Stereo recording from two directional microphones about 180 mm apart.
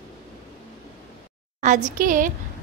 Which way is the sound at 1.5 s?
40° right (ahead or behind).